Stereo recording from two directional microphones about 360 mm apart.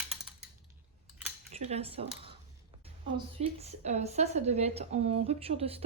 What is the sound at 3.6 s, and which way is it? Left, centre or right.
A woman's voice, centre.